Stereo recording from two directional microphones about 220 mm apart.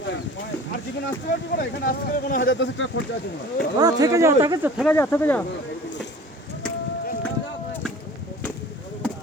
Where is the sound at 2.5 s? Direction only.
55° left (ahead or behind).